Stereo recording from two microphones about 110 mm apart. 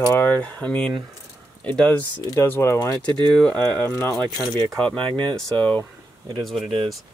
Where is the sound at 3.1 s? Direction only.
45° right (ahead or behind).